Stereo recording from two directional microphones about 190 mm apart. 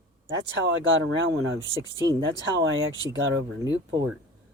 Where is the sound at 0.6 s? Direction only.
90° right.